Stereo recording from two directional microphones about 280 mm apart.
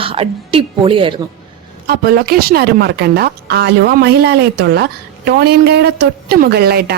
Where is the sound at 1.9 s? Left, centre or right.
Right.